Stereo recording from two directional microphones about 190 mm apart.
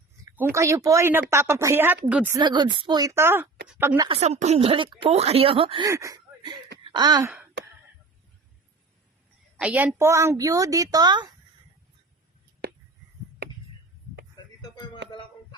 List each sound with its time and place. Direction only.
0.3 s a woman's voice: 15° right (ahead or behind)
4.1 s speech: 35° right (ahead or behind)
5.9 s a sound: 15° right (ahead or behind)
6.9 s gasp: 20° right (ahead or behind)
9.6 s a woman's voice: 10° right (ahead or behind)